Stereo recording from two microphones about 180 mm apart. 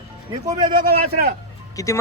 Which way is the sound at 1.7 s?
20° left (ahead or behind).